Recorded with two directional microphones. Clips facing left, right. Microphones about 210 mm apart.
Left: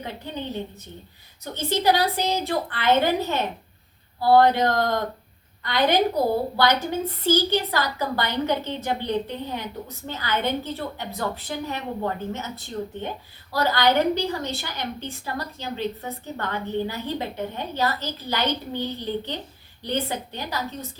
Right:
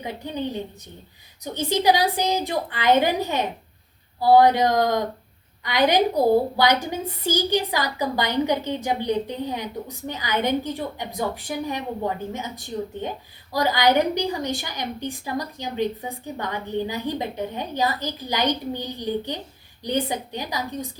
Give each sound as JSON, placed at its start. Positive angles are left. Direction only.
{"t": 0.0, "sound": "a woman's voice", "side_deg": -15}